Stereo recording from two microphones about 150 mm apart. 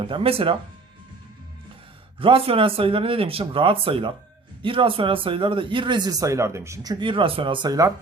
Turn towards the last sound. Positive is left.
turn(degrees=-25)  # may be behind; listen again after turning